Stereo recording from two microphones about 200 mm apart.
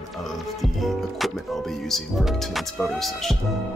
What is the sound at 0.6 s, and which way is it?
Music, centre (ahead or behind).